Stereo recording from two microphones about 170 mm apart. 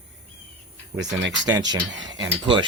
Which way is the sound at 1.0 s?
90° right.